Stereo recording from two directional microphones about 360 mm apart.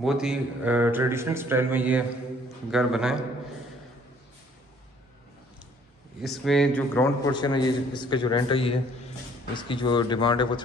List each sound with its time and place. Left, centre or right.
0.0 s a man's voice: centre
6.2 s a man's voice: centre